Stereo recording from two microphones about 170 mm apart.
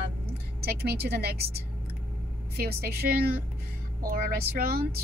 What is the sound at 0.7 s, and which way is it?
A woman's voice, 70° right (ahead or behind).